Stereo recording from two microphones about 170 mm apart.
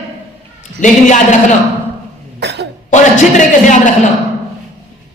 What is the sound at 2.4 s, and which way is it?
Cough, 85° right.